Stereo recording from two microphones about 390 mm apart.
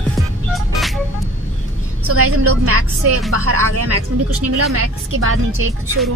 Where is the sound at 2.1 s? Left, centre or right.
Right.